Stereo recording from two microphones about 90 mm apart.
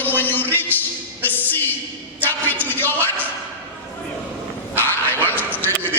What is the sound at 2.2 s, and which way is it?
Music, 20° left (ahead or behind).